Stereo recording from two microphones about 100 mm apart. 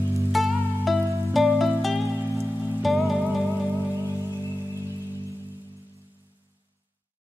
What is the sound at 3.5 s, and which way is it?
Music, 25° left (ahead or behind).